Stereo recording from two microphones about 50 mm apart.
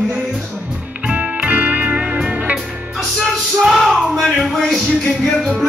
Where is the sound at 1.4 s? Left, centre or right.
Right.